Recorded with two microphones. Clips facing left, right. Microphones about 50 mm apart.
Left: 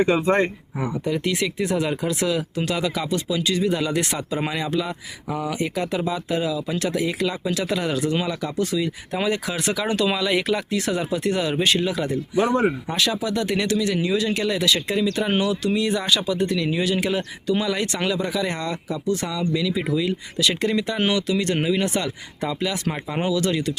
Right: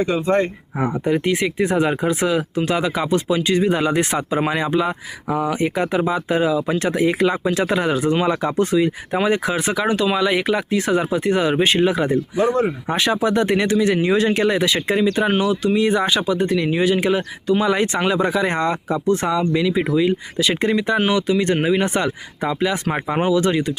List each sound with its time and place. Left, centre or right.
0.1 s speech: left
0.8 s speech: right
9.2 s speech: right
18.1 s speech: right